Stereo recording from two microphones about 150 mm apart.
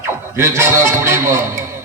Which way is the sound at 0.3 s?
20° right (ahead or behind).